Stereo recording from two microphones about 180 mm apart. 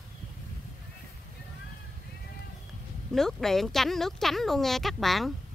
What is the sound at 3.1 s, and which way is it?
Speech, centre (ahead or behind).